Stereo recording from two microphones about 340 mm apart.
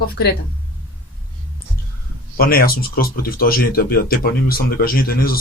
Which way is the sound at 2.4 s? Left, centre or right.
Left.